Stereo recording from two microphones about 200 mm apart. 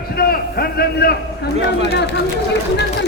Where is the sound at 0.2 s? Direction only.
50° left (ahead or behind).